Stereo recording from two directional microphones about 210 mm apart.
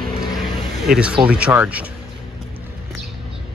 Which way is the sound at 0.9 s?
5° right (ahead or behind).